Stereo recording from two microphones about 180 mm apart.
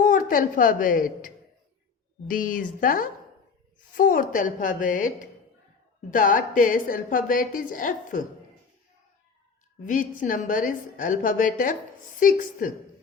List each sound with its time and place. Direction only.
0.0 s a woman's voice: 50° left (ahead or behind)
9.8 s a woman's voice: 45° left (ahead or behind)